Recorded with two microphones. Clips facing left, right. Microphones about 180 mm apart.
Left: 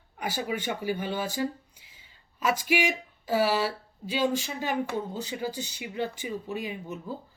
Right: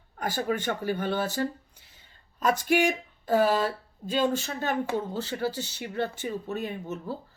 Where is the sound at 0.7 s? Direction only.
10° left (ahead or behind).